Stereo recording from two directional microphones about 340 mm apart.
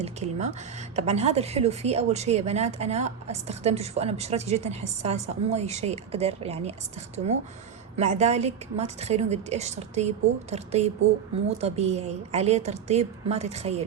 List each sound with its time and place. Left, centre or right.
0.0 s a woman's voice: centre
7.9 s a woman's voice: centre